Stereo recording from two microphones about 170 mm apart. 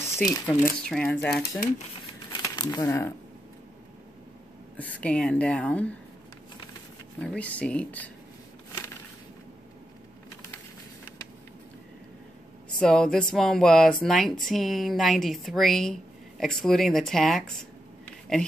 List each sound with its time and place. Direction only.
0.1 s speech: 15° left (ahead or behind)
2.4 s speech: 25° left (ahead or behind)
4.7 s speech: 10° left (ahead or behind)
7.2 s speech: 10° left (ahead or behind)
12.7 s speech: 5° left (ahead or behind)